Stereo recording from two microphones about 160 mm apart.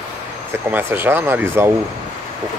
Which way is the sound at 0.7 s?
15° right (ahead or behind).